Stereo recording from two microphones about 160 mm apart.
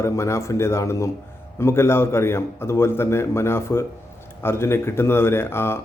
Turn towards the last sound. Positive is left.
turn(degrees=15)  # may be behind; listen again after turning